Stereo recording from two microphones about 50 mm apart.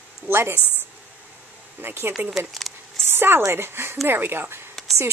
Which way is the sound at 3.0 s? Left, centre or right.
Right.